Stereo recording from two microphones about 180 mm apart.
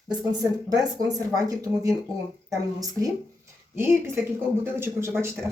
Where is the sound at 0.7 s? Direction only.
20° right (ahead or behind).